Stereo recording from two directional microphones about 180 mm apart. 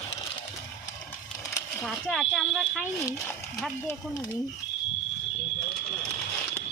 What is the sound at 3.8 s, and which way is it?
Speech, 20° left (ahead or behind).